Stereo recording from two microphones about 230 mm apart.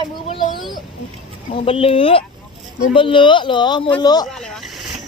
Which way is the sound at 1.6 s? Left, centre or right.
Left.